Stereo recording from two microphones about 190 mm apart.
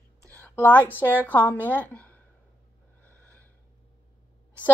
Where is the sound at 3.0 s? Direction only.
10° left (ahead or behind).